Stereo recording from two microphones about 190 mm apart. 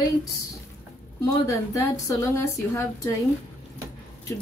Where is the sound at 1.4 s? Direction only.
15° left (ahead or behind).